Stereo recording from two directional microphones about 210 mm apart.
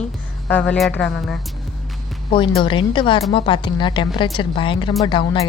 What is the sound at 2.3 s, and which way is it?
Speech, 25° left (ahead or behind).